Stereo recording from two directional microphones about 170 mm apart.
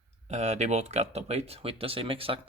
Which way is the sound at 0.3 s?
40° right (ahead or behind).